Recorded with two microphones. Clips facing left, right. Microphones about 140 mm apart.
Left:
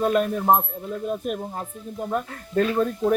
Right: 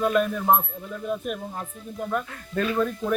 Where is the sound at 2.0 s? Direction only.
30° left (ahead or behind).